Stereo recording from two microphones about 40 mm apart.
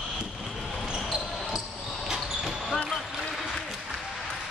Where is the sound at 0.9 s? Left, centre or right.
Centre.